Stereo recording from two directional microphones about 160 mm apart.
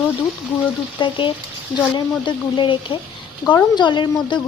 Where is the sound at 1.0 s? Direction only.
30° left (ahead or behind).